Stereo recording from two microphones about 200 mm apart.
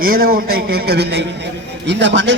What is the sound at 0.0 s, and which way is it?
A man's voice, 45° right (ahead or behind).